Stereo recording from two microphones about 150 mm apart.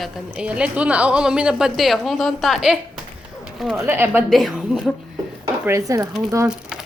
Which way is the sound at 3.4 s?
Centre (ahead or behind).